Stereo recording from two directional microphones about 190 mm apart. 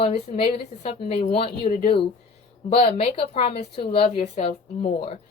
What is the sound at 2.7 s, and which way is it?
Speech, 35° left (ahead or behind).